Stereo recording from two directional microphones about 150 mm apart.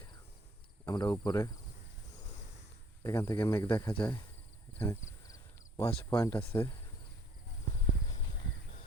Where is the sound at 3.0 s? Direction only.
20° left (ahead or behind).